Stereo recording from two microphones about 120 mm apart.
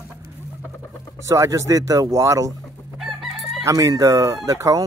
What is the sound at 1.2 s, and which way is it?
Speech, 25° right (ahead or behind).